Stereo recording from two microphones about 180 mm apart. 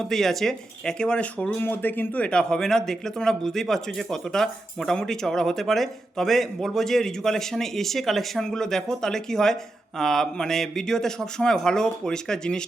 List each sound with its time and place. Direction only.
0.0 s speech: centre (ahead or behind)